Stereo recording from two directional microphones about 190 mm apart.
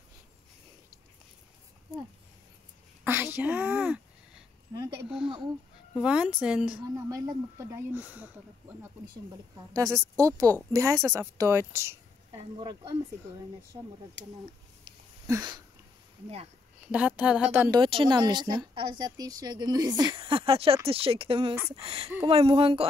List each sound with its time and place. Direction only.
3.0 s speech: 10° right (ahead or behind)
5.9 s a woman's voice: 5° right (ahead or behind)
7.1 s speech: 15° right (ahead or behind)
9.8 s a woman's voice: 15° right (ahead or behind)
15.2 s a woman's voice: 20° right (ahead or behind)
16.8 s speech: 5° right (ahead or behind)
17.6 s a woman's voice: 25° right (ahead or behind)